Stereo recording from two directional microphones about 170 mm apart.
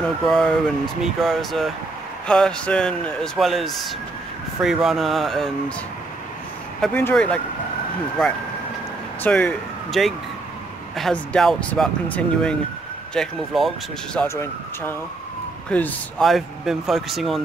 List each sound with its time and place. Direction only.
0.2 s a man's voice: centre (ahead or behind)
6.8 s speech: 10° left (ahead or behind)
9.2 s a man's voice: 5° left (ahead or behind)
14.2 s a man's voice: 15° left (ahead or behind); by 17.4 s centre (ahead or behind)